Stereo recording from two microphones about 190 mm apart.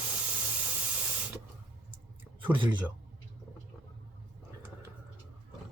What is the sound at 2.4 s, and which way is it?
Speech, 25° right (ahead or behind).